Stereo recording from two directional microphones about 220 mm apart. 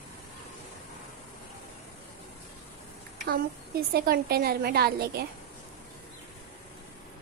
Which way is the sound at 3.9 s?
45° right (ahead or behind).